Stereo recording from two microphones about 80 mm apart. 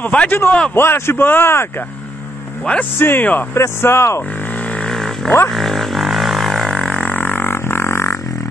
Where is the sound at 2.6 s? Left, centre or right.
Centre.